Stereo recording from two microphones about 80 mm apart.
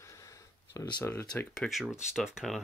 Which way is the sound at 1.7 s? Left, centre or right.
Centre.